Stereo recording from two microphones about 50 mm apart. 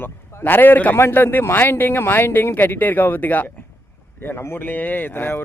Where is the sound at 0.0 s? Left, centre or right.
Left.